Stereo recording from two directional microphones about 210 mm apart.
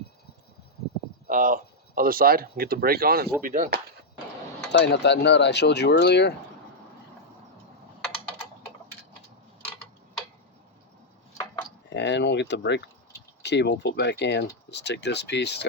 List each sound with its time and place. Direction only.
1.3 s speech: 40° right (ahead or behind)
4.7 s speech: 55° left (ahead or behind)
11.9 s speech: 55° left (ahead or behind)